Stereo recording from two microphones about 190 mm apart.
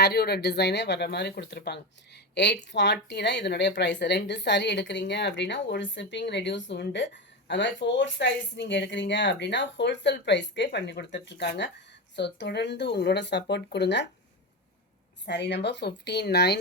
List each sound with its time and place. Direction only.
0.0 s a woman's voice: 55° left (ahead or behind)
15.3 s speech: 65° left (ahead or behind)